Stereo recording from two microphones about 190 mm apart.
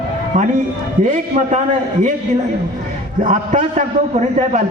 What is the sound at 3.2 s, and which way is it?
A man's voice, 40° right (ahead or behind).